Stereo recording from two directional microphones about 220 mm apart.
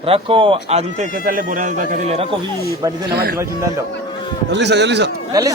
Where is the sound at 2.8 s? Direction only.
20° right (ahead or behind).